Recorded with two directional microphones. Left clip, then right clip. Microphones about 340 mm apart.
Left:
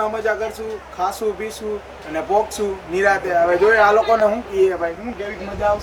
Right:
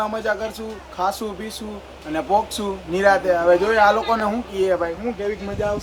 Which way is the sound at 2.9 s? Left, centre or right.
Centre.